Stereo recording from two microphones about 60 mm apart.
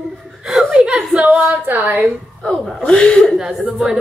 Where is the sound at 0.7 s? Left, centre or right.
Centre.